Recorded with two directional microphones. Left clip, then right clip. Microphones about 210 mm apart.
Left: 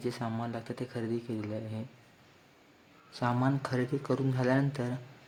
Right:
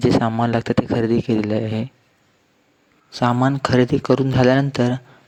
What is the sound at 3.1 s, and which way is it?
Speech, 35° right (ahead or behind).